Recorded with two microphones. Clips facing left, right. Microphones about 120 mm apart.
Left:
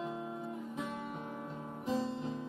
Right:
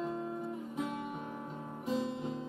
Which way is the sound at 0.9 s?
15° right (ahead or behind).